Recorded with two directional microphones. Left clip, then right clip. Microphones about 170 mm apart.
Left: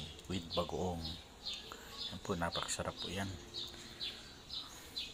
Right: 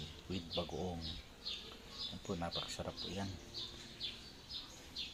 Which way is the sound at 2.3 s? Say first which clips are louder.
Left 5 dB; 25° left (ahead or behind).